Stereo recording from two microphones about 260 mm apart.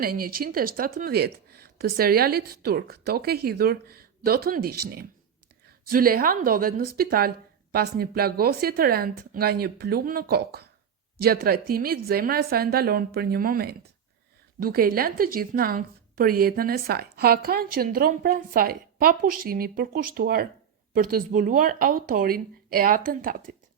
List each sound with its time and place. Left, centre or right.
0.0 s a woman's voice: right